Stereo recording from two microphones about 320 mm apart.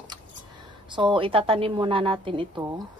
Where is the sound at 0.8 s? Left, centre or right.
Centre.